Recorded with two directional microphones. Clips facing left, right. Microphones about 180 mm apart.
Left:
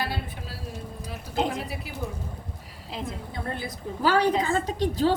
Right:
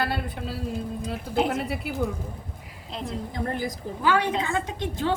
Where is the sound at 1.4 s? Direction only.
5° right (ahead or behind).